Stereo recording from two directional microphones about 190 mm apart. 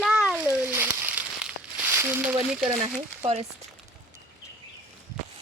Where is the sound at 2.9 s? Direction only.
35° right (ahead or behind).